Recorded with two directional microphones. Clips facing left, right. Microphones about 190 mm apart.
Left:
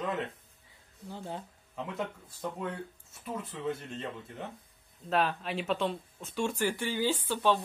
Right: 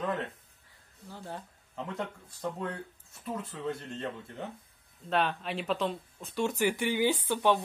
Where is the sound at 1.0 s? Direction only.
20° left (ahead or behind).